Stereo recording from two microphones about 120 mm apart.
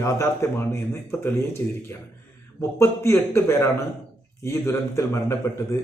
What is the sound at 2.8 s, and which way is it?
A man's voice, 20° left (ahead or behind).